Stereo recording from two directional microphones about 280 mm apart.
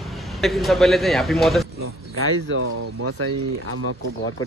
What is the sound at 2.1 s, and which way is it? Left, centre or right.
Speech, right.